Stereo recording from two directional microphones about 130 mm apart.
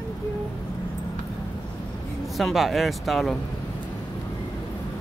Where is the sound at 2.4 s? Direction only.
Centre (ahead or behind).